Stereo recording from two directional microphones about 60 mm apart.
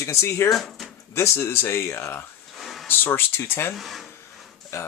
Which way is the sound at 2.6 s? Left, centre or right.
Centre.